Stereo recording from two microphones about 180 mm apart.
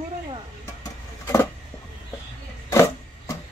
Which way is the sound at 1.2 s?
15° left (ahead or behind).